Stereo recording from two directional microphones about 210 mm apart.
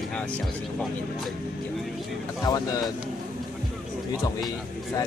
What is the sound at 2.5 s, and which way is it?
Speech, 15° left (ahead or behind).